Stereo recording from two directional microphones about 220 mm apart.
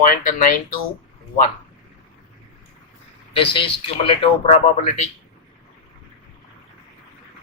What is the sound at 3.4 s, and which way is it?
Speech, 25° left (ahead or behind).